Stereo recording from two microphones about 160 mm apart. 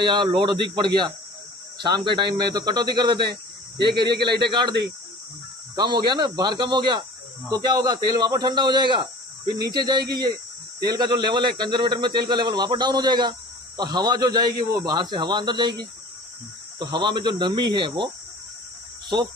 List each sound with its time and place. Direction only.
0.0 s a man's voice: 30° right (ahead or behind)
5.8 s a man's voice: 25° right (ahead or behind)
16.7 s a man's voice: 25° right (ahead or behind)